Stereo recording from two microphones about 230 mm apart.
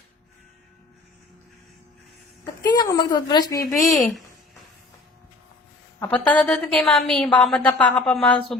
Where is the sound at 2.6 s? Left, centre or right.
Centre.